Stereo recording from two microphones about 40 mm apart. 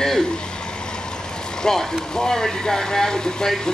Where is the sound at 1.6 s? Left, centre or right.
Centre.